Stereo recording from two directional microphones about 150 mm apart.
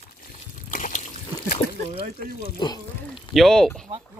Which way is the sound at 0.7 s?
60° left (ahead or behind).